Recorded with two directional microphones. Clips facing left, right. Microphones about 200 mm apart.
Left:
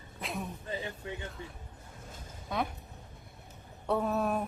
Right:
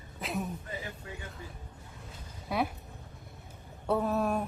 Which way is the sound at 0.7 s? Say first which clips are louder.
Left 3 dB; 25° left (ahead or behind).